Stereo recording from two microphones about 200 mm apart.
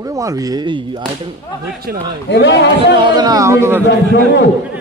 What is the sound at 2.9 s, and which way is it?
Speech, 20° right (ahead or behind).